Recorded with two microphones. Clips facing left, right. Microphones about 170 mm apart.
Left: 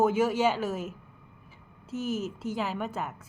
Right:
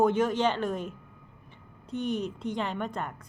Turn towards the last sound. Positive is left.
turn(degrees=5)  # may be behind; listen again after turning